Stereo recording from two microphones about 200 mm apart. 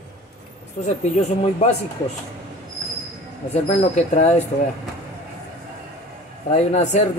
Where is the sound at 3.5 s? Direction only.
35° left (ahead or behind).